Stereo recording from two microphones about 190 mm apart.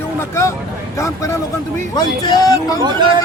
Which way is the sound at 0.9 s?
15° left (ahead or behind).